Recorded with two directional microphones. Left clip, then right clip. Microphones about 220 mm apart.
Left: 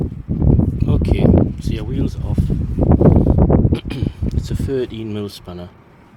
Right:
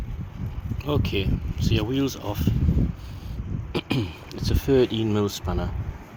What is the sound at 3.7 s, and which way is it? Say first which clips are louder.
Speech: left 3 dB; 10° left (ahead or behind).